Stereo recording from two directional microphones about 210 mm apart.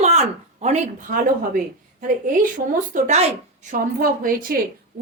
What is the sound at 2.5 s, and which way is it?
A woman's voice, 40° right (ahead or behind).